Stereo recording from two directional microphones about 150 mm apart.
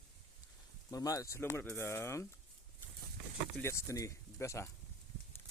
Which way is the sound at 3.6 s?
20° left (ahead or behind).